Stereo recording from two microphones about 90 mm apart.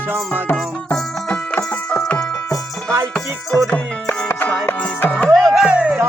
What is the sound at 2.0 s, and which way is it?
Music, 10° left (ahead or behind).